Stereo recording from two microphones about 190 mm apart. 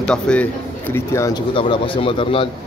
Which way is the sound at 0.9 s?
15° left (ahead or behind).